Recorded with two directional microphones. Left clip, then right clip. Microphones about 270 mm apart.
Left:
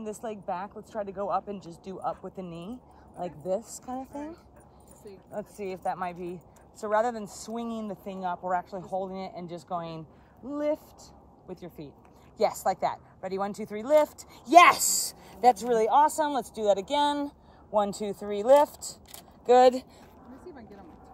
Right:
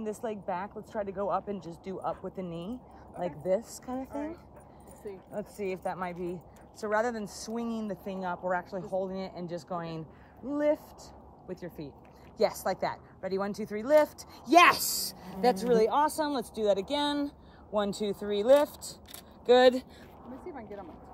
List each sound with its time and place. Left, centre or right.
0.0 s speech: centre
4.1 s speech: centre
5.3 s speech: centre
13.4 s speech: centre
20.5 s a sound: centre